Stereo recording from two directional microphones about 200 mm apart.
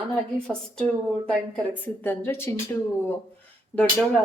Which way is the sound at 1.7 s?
10° left (ahead or behind).